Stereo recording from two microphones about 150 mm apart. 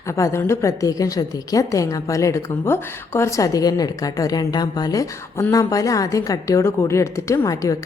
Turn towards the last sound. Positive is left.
turn(degrees=20)  # may be behind; listen again after turning